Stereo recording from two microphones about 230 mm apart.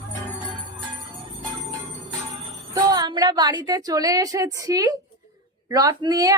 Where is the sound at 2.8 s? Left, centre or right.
Centre.